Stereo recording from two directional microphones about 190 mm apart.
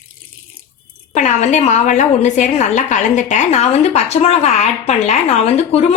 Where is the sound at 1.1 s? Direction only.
40° left (ahead or behind).